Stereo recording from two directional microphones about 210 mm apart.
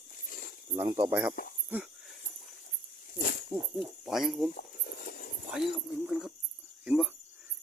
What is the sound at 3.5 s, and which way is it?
Speech, centre (ahead or behind).